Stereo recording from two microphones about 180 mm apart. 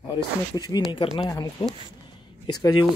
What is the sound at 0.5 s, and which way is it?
Speech, 20° left (ahead or behind).